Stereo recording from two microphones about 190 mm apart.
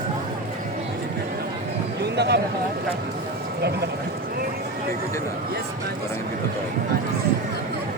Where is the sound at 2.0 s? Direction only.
60° right (ahead or behind).